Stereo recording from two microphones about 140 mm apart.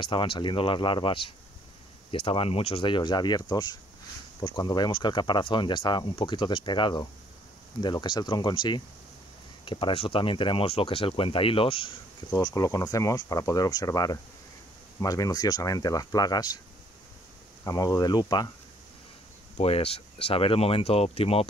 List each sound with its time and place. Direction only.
0.0 s speech: 35° left (ahead or behind)
12.3 s speech: 25° left (ahead or behind)
17.6 s speech: 25° left (ahead or behind)
19.5 s speech: 45° left (ahead or behind)